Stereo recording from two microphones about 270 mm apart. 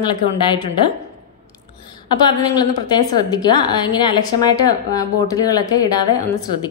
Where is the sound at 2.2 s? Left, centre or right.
Centre.